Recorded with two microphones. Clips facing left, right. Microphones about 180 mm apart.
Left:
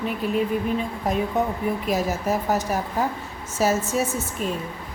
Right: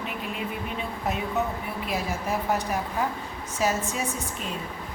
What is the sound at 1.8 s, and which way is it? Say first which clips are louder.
A woman's voice: left 4 dB; 40° left (ahead or behind).